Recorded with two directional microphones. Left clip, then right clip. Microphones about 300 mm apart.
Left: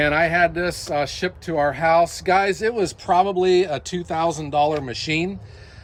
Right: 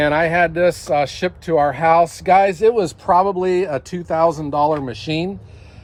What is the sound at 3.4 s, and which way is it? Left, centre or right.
Speech, centre.